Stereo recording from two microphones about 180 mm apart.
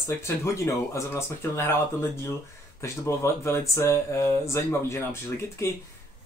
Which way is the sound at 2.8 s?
15° left (ahead or behind).